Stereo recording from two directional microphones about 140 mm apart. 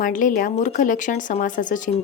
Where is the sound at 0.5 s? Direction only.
60° left (ahead or behind).